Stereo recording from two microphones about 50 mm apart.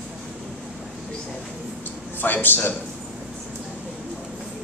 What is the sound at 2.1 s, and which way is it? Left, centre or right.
Speech, left.